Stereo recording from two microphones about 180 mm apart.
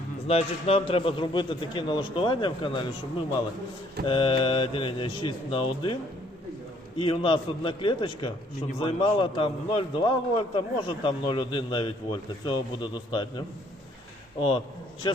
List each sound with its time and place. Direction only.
0.3 s a man's voice: 35° left (ahead or behind)
7.0 s a man's voice: 30° left (ahead or behind)